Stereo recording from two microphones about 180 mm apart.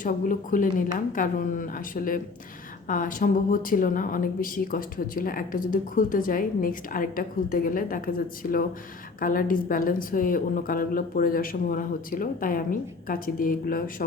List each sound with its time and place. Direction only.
0.0 s a woman's voice: 45° left (ahead or behind)